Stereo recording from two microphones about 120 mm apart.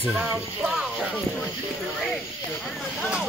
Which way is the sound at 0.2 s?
5° right (ahead or behind).